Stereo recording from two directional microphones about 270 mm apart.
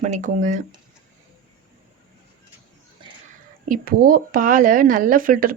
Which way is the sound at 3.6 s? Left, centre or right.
Right.